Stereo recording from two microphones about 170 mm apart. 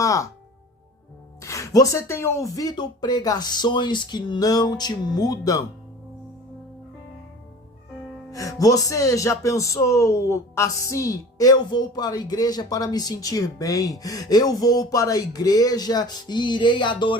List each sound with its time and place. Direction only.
0.0 s music: 20° left (ahead or behind)
1.4 s speech: 15° left (ahead or behind)
8.3 s speech: 20° left (ahead or behind)